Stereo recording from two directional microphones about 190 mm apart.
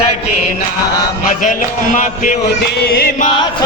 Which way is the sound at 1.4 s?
40° left (ahead or behind).